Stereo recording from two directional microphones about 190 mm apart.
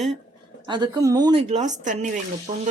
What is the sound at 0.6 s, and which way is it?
A woman's voice, 25° right (ahead or behind).